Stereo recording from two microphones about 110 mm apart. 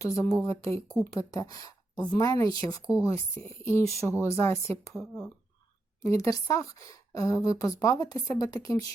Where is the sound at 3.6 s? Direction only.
25° left (ahead or behind).